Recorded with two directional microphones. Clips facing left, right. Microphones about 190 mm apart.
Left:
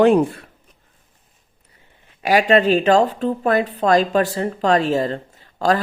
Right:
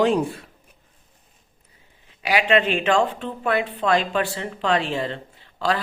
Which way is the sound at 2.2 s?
45° left (ahead or behind).